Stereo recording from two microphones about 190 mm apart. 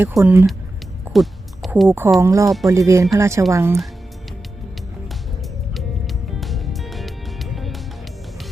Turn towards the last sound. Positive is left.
turn(degrees=0)  # may be behind; listen again after turning